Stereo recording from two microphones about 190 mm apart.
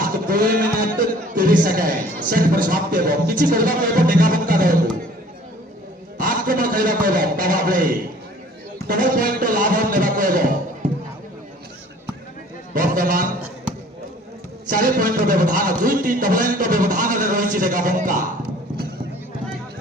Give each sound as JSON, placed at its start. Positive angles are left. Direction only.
{"t": 0.0, "sound": "speech", "side_deg": -50}
{"t": 6.1, "sound": "a man's voice", "side_deg": -45}
{"t": 12.7, "sound": "a sound", "side_deg": -50}
{"t": 14.7, "sound": "speech", "side_deg": -50}